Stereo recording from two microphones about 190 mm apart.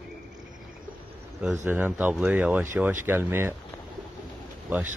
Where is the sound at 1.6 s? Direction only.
10° right (ahead or behind).